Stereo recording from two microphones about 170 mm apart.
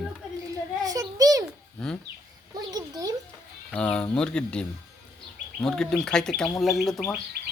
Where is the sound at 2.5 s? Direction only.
20° right (ahead or behind).